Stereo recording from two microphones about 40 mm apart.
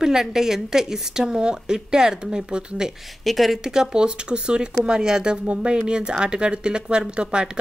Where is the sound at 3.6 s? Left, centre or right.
Centre.